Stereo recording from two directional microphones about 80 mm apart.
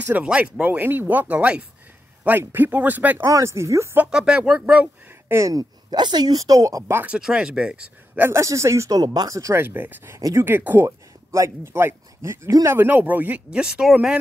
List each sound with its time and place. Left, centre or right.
0.0 s speech: centre
3.3 s speech: right
4.1 s speech: centre
5.5 s speech: right
7.1 s speech: centre
8.2 s speech: right
9.0 s speech: right
9.6 s speech: right
12.7 s speech: right
13.5 s speech: centre